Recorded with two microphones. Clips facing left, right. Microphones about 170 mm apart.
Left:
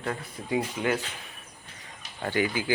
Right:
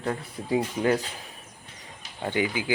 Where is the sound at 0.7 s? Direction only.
35° right (ahead or behind).